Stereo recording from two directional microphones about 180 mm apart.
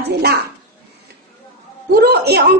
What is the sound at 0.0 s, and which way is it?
Speech, 65° right (ahead or behind).